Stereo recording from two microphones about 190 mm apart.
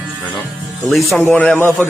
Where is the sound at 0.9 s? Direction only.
Centre (ahead or behind).